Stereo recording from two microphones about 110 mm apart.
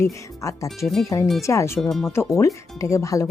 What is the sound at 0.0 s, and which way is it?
Speech, 30° left (ahead or behind).